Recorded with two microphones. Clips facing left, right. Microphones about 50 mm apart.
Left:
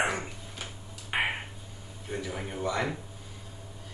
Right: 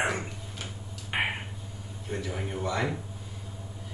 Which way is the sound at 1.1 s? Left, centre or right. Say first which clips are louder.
Even; centre.